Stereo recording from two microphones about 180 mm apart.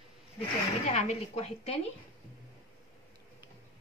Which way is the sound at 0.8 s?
40° left (ahead or behind).